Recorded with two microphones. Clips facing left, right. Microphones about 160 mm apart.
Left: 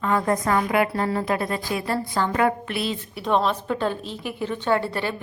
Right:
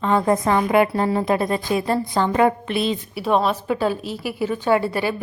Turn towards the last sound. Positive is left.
turn(degrees=-10)  # may be behind; listen again after turning